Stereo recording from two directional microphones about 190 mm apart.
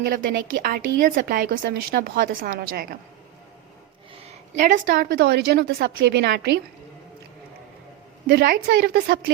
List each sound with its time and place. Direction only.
0.0 s a woman's voice: 45° right (ahead or behind)
4.1 s a woman's voice: 35° right (ahead or behind); by 6.6 s 60° right (ahead or behind)
8.3 s a woman's voice: 50° right (ahead or behind)